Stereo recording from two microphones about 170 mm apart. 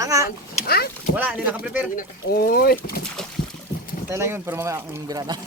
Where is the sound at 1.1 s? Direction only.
10° right (ahead or behind).